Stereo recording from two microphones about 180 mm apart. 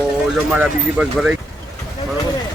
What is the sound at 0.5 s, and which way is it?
Speech, 5° right (ahead or behind).